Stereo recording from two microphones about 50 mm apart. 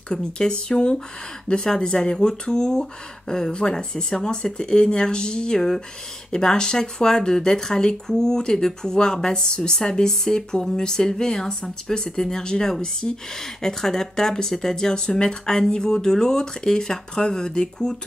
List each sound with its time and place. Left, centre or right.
0.1 s speech: centre